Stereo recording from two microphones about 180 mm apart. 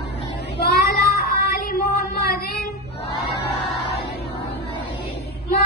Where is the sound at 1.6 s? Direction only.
60° left (ahead or behind).